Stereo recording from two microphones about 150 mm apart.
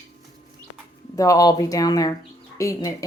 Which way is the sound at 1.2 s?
25° left (ahead or behind).